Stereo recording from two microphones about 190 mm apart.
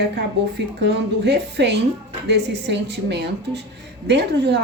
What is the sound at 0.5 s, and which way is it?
Speech, 65° right (ahead or behind).